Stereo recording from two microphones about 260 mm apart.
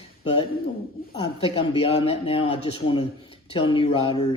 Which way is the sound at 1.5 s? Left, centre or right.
Left.